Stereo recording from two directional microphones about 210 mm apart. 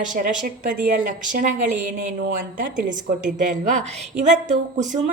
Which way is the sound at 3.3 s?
35° right (ahead or behind).